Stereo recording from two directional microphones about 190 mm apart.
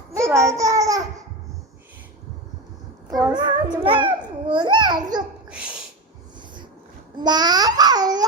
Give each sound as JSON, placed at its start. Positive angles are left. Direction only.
{"t": 0.1, "sound": "a child's voice", "side_deg": -15}
{"t": 3.3, "sound": "a child's voice", "side_deg": -25}
{"t": 5.5, "sound": "sneeze", "side_deg": -5}
{"t": 7.2, "sound": "a child's voice", "side_deg": -20}